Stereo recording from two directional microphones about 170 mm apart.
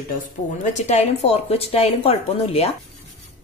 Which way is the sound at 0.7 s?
40° left (ahead or behind).